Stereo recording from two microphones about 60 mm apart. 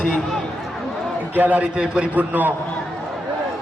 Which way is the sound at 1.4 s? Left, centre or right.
Right.